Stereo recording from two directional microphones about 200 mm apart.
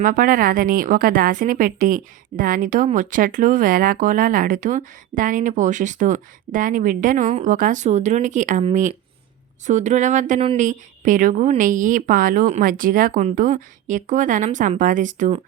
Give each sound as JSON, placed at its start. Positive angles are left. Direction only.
{"t": 0.0, "sound": "a woman's voice", "side_deg": -45}